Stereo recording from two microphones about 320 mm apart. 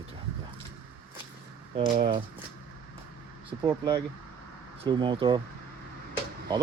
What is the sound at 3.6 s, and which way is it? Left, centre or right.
Speech, centre.